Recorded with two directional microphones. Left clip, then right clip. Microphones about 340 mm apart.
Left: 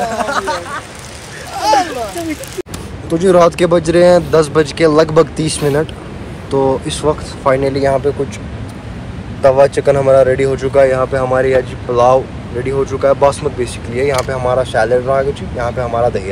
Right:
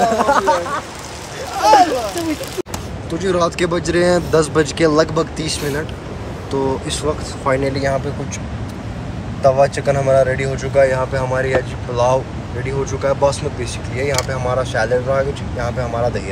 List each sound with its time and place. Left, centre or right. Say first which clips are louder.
0.1 s a sound: right 3 dB; right
1.6 s speech: right 2 dB; centre
3.1 s speech: left 8 dB; centre
9.6 s speech: left 5 dB; centre